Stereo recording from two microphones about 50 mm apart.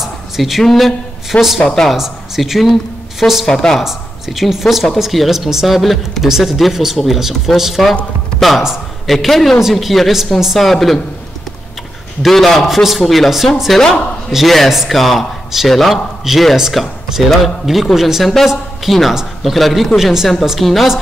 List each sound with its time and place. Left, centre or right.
0.0 s a sound: centre
1.6 s speech: centre
2.0 s speech: centre
3.4 s speech: centre
3.8 s a man's voice: centre
12.2 s a man's voice: centre